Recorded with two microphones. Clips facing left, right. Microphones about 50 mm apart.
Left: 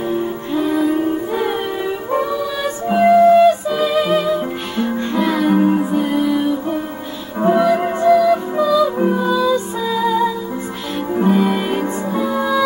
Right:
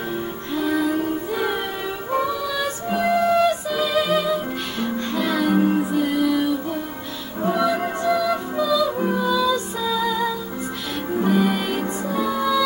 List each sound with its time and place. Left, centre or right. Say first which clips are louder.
0.6 s music: left 4 dB; centre
7.3 s music: left 8 dB; left
7.6 s music: left 7 dB; left
11.3 s music: left 4 dB; centre